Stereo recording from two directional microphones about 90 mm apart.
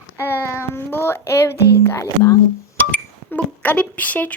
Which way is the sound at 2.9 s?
20° left (ahead or behind).